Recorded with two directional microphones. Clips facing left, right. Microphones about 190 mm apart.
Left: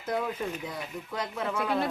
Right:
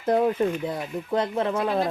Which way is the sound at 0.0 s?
50° right (ahead or behind).